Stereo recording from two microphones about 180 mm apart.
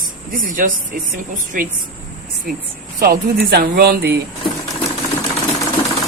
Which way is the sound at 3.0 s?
55° right (ahead or behind).